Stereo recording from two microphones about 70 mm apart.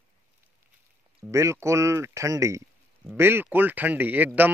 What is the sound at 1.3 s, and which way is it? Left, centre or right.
Speech, right.